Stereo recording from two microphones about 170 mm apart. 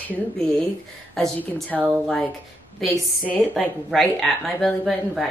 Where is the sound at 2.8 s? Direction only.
Centre (ahead or behind).